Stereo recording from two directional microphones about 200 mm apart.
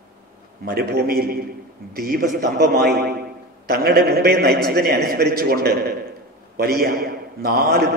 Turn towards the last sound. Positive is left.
turn(degrees=-50)  # may be behind; listen again after turning